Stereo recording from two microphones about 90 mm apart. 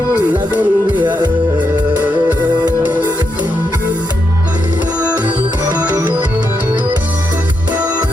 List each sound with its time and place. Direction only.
0.3 s music: 20° right (ahead or behind)
5.0 s music: 20° right (ahead or behind)